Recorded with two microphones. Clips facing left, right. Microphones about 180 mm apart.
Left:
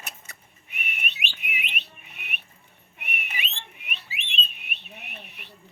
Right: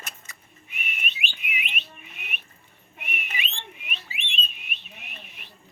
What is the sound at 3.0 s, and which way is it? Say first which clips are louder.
Whistling: right 1 dB; 65° left (ahead or behind).